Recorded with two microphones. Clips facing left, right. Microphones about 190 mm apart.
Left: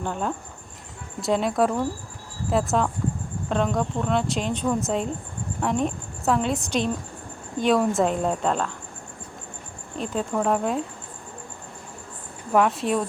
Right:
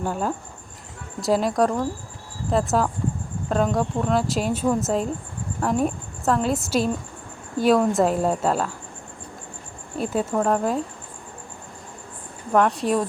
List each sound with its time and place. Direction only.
0.0 s a woman's voice: 5° right (ahead or behind)
10.0 s speech: 5° right (ahead or behind)
12.5 s speech: centre (ahead or behind)